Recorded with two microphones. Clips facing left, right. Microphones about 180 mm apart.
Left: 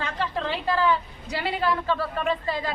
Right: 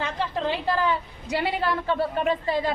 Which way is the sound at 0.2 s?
20° right (ahead or behind).